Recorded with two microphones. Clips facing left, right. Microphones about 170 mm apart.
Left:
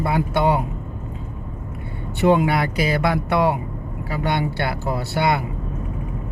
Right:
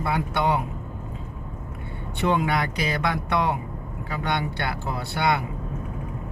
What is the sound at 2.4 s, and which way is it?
Speech, 5° left (ahead or behind).